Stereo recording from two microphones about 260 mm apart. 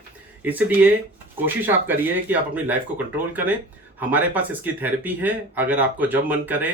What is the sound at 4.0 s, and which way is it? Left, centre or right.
Speech, centre.